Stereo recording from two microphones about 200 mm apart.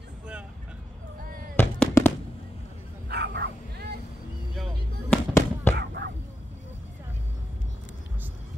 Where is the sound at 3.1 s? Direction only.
55° right (ahead or behind).